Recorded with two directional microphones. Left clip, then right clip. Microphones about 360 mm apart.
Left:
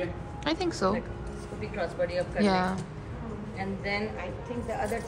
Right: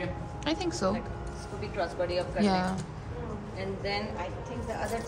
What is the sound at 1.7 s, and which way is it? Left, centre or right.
Speech, left.